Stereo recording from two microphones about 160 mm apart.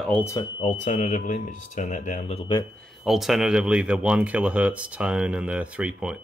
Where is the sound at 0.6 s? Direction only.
50° left (ahead or behind).